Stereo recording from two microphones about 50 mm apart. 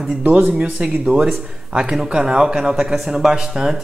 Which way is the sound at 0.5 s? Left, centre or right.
Right.